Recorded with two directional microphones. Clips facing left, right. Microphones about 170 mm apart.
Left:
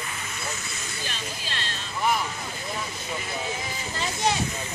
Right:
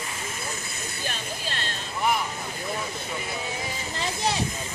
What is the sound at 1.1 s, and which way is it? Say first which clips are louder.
Speech: right 3 dB; 50° right (ahead or behind).